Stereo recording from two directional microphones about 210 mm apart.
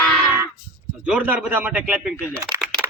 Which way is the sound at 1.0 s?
5° right (ahead or behind).